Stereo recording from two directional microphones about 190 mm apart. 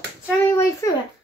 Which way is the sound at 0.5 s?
15° left (ahead or behind).